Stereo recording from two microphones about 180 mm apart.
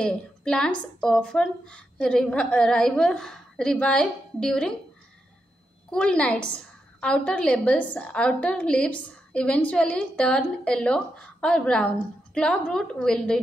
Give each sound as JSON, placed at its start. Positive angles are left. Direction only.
{"t": 0.0, "sound": "a woman's voice", "side_deg": 5}
{"t": 5.9, "sound": "a woman's voice", "side_deg": 5}